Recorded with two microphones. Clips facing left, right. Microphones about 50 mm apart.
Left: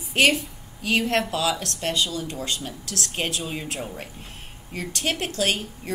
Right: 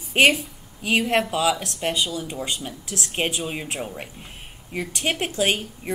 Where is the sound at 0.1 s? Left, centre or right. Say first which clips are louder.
Right 2 dB; centre.